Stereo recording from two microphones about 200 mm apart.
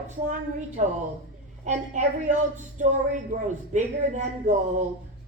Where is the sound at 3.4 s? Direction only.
35° right (ahead or behind).